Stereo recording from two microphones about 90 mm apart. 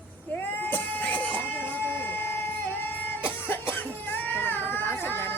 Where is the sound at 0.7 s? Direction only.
20° left (ahead or behind).